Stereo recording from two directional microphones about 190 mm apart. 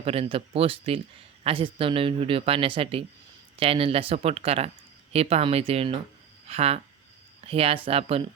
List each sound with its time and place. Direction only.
0.0 s speech: 30° right (ahead or behind)